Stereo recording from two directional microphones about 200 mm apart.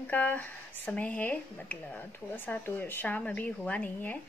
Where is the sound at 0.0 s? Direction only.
10° left (ahead or behind).